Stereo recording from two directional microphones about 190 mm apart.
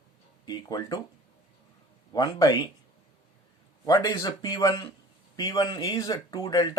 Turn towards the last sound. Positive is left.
turn(degrees=20)  # may be behind; listen again after turning